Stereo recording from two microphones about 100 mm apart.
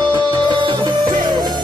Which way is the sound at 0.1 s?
50° right (ahead or behind).